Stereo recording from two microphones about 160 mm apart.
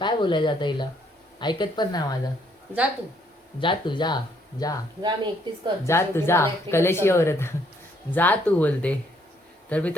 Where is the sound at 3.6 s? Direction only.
30° left (ahead or behind).